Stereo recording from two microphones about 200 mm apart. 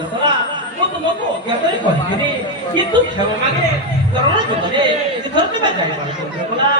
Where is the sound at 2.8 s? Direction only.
20° right (ahead or behind).